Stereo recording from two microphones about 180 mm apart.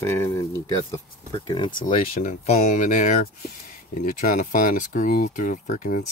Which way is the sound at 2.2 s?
45° left (ahead or behind).